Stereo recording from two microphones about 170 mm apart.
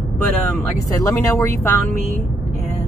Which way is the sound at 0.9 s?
20° left (ahead or behind).